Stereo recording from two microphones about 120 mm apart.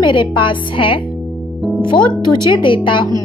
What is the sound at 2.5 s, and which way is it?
Speech, 45° left (ahead or behind).